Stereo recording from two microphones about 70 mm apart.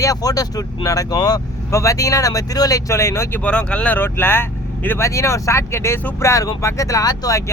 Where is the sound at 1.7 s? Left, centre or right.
Left.